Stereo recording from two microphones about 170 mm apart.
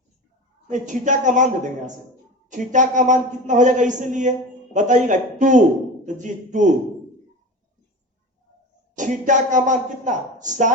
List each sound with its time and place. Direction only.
0.7 s speech: 45° right (ahead or behind)
2.5 s speech: 45° right (ahead or behind)
9.0 s speech: 45° right (ahead or behind)